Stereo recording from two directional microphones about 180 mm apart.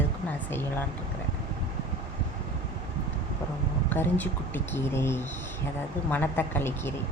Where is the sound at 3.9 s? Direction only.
10° left (ahead or behind).